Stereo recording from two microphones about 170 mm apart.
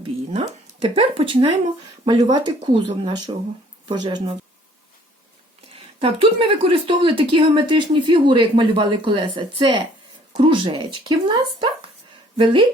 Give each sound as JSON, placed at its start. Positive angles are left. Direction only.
{"t": 0.0, "sound": "speech", "side_deg": -40}
{"t": 5.7, "sound": "speech", "side_deg": -30}